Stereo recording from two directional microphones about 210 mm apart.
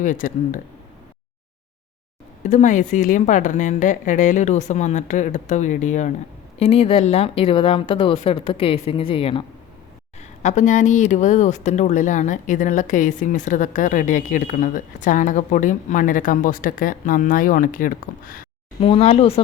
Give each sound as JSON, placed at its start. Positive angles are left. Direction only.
{"t": 0.0, "sound": "speech", "side_deg": 40}
{"t": 2.4, "sound": "speech", "side_deg": 35}
{"t": 18.8, "sound": "speech", "side_deg": 25}